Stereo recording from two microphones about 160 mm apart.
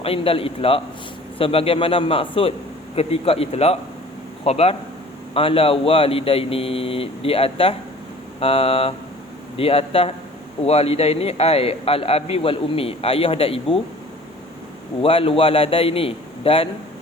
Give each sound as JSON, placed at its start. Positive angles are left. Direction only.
{"t": 0.0, "sound": "a man's voice", "side_deg": 35}
{"t": 15.0, "sound": "a man's voice", "side_deg": 35}